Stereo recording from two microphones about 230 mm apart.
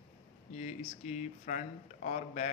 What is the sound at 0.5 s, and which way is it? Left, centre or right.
A man's voice, left.